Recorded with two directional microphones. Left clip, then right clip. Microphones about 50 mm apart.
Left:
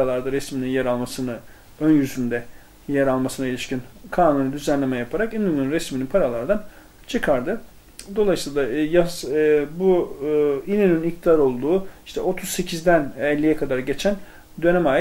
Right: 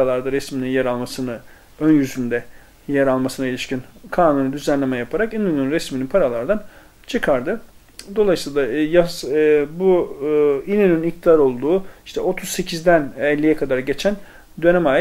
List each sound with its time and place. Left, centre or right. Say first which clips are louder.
0.0 s speech: right 3 dB; centre